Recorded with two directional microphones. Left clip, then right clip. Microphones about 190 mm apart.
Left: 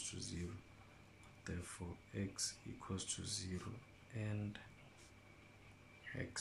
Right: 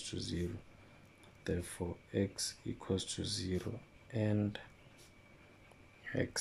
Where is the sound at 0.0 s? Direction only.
25° right (ahead or behind).